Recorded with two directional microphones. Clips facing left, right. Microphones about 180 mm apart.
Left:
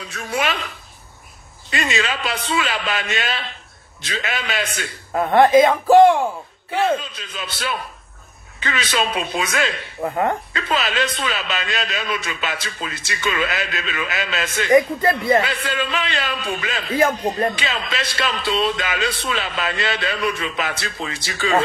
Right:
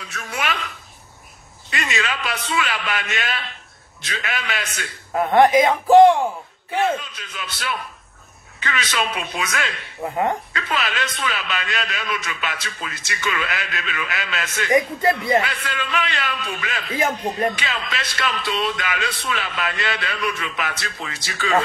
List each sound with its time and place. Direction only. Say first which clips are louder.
0.1 s a sound: left 4 dB; 30° left (ahead or behind)
1.7 s a man's voice: left 3 dB; 30° left (ahead or behind)
5.3 s speech: left 2 dB; 15° right (ahead or behind)
6.8 s a man's voice: left 2 dB; 30° left (ahead or behind)
15.0 s speech: left 1 dB; 15° right (ahead or behind)
15.4 s a man's voice: left 4 dB; 30° left (ahead or behind)